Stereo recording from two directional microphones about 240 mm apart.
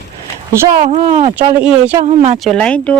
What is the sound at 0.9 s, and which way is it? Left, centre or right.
Speech, right.